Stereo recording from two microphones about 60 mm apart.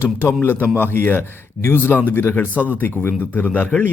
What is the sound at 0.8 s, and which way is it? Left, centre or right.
Speech, left.